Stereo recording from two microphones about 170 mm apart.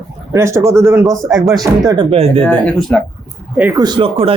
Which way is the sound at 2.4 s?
5° left (ahead or behind).